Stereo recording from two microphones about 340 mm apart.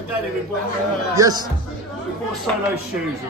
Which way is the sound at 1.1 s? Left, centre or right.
Centre.